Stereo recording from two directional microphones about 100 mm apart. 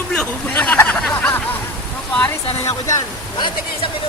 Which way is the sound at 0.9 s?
10° left (ahead or behind).